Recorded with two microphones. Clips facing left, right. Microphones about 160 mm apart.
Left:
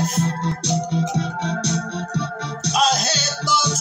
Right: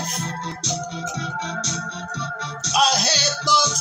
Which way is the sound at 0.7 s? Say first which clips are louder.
Left 7 dB; 65° left (ahead or behind).